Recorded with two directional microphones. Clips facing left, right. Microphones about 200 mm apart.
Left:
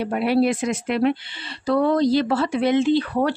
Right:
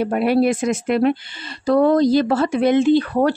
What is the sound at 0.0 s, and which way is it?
Speech, 50° right (ahead or behind).